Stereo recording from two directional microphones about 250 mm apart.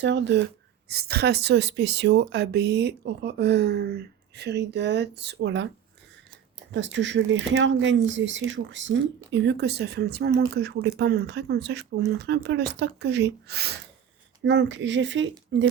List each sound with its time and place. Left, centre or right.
0.0 s speech: right
6.7 s speech: right